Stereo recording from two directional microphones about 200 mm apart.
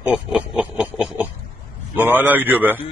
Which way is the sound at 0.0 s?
5° right (ahead or behind).